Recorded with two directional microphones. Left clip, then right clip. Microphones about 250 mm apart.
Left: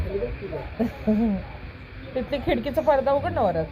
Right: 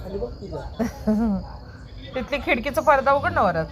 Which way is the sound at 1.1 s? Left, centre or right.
Right.